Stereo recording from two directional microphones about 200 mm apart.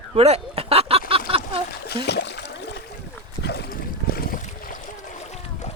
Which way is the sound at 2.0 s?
60° left (ahead or behind).